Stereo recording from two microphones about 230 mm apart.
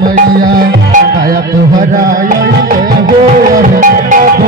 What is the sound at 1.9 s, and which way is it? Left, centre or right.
Tabla, right.